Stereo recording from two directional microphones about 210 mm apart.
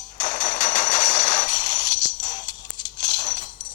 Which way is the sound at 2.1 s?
35° left (ahead or behind).